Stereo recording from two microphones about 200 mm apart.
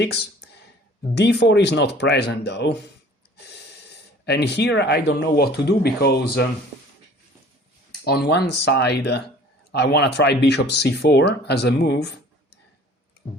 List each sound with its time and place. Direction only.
0.0 s a sound: 55° left (ahead or behind)
1.1 s speech: 55° left (ahead or behind)
8.0 s speech: 55° left (ahead or behind)